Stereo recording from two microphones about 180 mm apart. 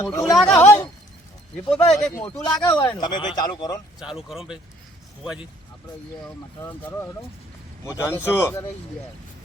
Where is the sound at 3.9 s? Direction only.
Centre (ahead or behind).